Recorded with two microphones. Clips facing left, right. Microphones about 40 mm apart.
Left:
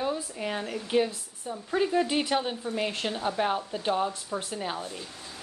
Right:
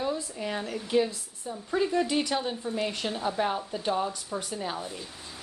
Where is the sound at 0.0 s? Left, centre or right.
Centre.